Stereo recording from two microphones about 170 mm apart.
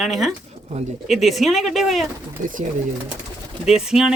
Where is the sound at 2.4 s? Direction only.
50° right (ahead or behind).